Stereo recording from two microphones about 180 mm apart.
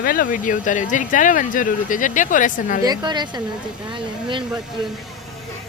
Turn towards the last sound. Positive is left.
turn(degrees=-25)  # may be behind; listen again after turning